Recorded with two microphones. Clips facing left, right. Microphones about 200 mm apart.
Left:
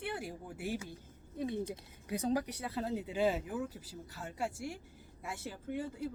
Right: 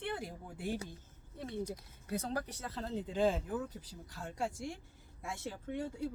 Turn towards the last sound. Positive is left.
turn(degrees=0)  # may be behind; listen again after turning